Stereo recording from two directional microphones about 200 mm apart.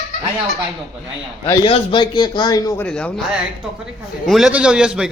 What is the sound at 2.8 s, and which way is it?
Speech, 5° left (ahead or behind).